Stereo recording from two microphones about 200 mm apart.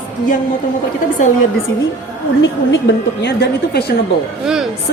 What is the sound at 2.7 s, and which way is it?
A woman's voice, 65° left (ahead or behind).